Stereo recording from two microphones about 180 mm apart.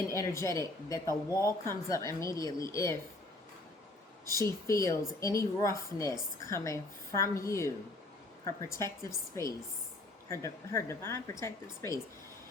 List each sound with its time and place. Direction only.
0.1 s speech: 15° left (ahead or behind)
4.4 s speech: 15° left (ahead or behind)
10.2 s speech: 15° left (ahead or behind)